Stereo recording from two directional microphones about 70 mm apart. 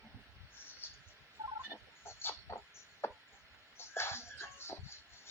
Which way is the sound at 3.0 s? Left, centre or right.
Left.